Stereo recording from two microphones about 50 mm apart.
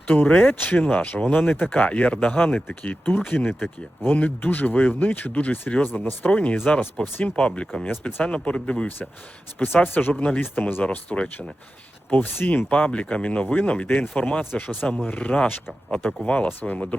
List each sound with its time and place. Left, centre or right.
0.2 s speech: left
1.7 s speech: left
4.4 s speech: left
7.3 s speech: left
9.6 s speech: left
10.8 s speech: left
12.1 s speech: left
12.7 s speech: left
13.8 s speech: left
16.5 s speech: left